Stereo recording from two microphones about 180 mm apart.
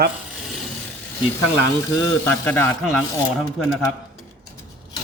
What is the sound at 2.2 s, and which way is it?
Speech, 10° left (ahead or behind).